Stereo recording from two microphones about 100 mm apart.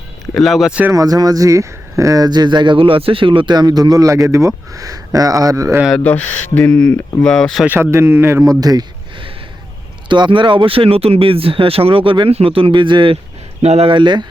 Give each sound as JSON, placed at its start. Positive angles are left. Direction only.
{"t": 0.3, "sound": "speech", "side_deg": 0}
{"t": 0.9, "sound": "speech", "side_deg": -35}
{"t": 6.0, "sound": "speech", "side_deg": 15}
{"t": 7.7, "sound": "speech", "side_deg": -25}
{"t": 8.4, "sound": "speech", "side_deg": -40}
{"t": 10.1, "sound": "speech", "side_deg": -55}
{"t": 13.6, "sound": "speech", "side_deg": -90}
{"t": 13.9, "sound": "speech", "side_deg": -50}